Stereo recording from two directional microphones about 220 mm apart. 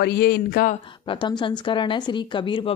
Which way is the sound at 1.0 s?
20° left (ahead or behind).